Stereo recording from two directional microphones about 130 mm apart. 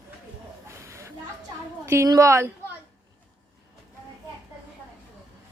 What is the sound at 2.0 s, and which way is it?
Speech, 25° right (ahead or behind).